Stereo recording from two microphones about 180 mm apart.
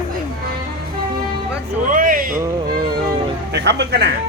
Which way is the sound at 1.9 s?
50° right (ahead or behind).